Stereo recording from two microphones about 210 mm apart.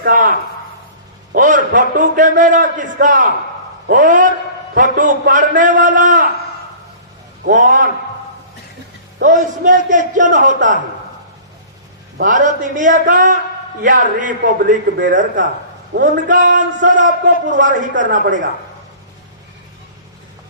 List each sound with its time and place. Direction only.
0.0 s a man's voice: 40° right (ahead or behind)
7.4 s a man's voice: 40° right (ahead or behind)
9.1 s a man's voice: 40° right (ahead or behind)
12.1 s a man's voice: 40° right (ahead or behind)